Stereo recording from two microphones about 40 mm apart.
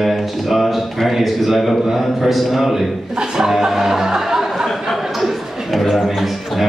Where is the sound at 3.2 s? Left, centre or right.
Centre.